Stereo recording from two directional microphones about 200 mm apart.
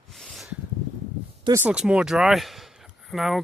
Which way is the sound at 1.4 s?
15° right (ahead or behind).